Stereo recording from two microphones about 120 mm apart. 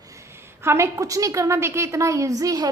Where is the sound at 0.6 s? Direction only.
20° right (ahead or behind).